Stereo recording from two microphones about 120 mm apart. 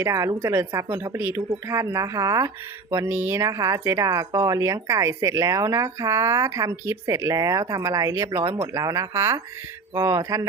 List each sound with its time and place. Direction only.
0.0 s speech: 25° right (ahead or behind)